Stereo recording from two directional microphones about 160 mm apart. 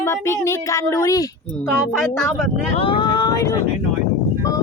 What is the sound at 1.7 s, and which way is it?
Speech, centre (ahead or behind).